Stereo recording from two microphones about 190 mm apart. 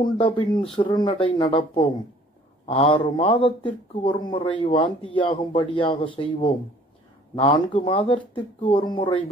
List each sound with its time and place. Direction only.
0.0 s a man's voice: 25° left (ahead or behind)